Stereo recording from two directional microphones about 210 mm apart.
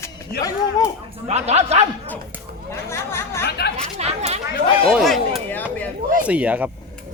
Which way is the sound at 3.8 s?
30° right (ahead or behind).